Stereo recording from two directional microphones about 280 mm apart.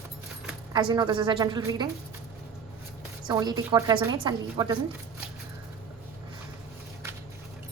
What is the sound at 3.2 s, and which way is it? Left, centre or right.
A woman's voice, centre.